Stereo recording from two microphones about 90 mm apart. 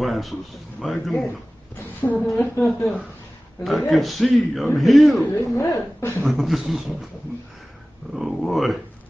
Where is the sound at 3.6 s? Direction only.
Centre (ahead or behind).